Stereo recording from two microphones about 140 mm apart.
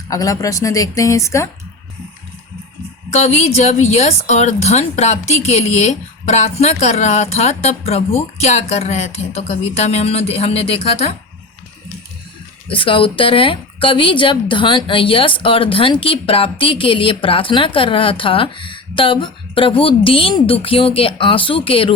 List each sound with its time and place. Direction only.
0.1 s a woman's voice: 25° left (ahead or behind)
3.1 s a woman's voice: 50° left (ahead or behind)
12.6 s a woman's voice: 40° left (ahead or behind)